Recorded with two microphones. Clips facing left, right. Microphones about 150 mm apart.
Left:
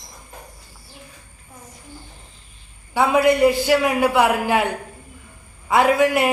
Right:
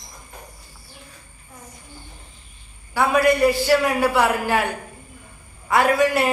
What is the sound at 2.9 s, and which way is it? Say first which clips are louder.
A man's voice: left 1 dB; 20° left (ahead or behind).